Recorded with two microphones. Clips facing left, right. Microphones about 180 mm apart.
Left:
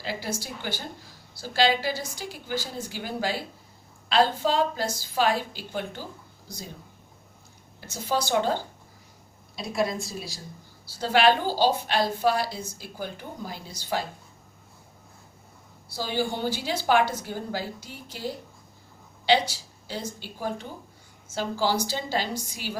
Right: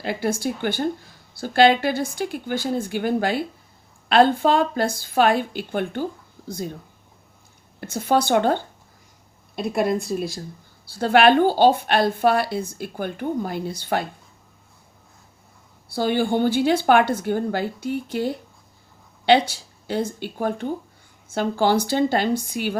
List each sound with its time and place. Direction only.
0.0 s a woman's voice: 55° right (ahead or behind)
7.8 s a woman's voice: 55° right (ahead or behind)
15.9 s a woman's voice: 60° right (ahead or behind)